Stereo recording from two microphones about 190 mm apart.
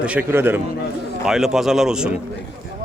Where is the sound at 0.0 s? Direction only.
10° right (ahead or behind).